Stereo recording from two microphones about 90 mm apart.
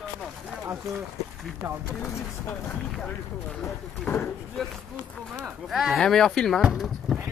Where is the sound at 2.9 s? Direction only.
5° left (ahead or behind).